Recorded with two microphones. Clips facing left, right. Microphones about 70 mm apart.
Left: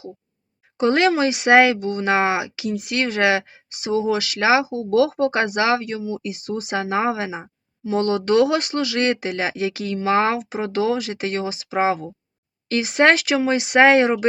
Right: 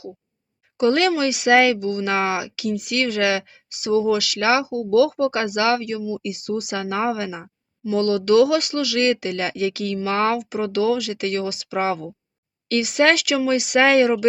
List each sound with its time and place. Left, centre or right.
0.8 s speech: left